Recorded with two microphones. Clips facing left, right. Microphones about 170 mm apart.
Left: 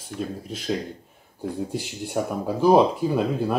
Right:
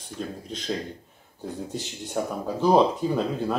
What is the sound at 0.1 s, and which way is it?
Speech, 65° left (ahead or behind).